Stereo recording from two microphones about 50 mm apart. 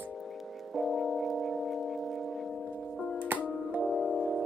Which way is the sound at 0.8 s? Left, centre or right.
Centre.